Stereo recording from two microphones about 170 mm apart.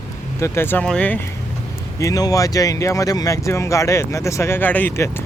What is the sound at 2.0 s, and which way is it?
Speech, 20° left (ahead or behind).